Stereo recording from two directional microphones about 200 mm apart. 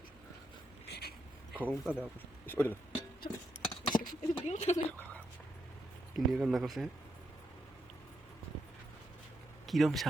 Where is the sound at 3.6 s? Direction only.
20° left (ahead or behind).